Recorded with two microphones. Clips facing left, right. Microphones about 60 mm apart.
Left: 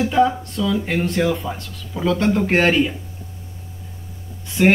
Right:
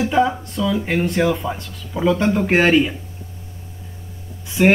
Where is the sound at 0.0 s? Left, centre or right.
Centre.